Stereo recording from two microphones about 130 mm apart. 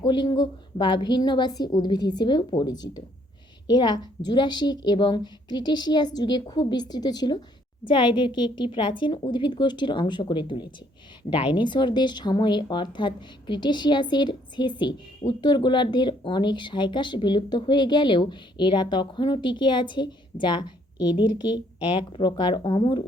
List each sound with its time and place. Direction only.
0.0 s speech: 35° left (ahead or behind)